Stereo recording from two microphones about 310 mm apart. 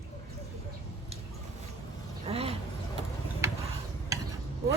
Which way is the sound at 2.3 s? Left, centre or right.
Centre.